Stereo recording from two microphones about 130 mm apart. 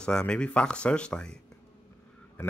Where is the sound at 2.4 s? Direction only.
15° left (ahead or behind).